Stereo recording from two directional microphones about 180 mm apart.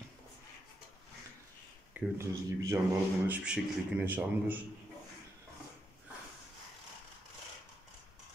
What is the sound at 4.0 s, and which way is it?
Speech, 10° right (ahead or behind).